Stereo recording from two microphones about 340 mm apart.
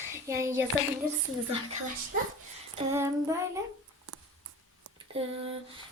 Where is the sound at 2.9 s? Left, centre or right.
Centre.